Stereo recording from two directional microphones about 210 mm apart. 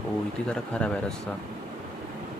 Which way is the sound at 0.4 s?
5° left (ahead or behind).